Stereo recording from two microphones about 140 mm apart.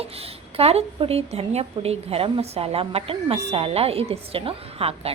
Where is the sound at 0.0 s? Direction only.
45° right (ahead or behind).